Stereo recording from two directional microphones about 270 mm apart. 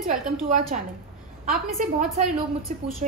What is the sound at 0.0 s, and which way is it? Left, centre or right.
Speech, right.